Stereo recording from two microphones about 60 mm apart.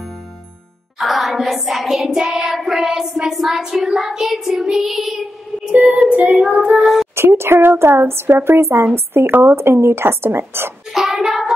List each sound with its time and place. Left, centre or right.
0.9 s child singing: centre
5.9 s child singing: right
6.3 s child singing: centre
7.2 s speech: right
10.9 s child singing: centre